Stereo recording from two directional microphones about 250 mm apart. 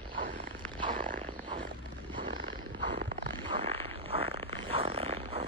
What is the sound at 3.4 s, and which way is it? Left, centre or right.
Zipper, right.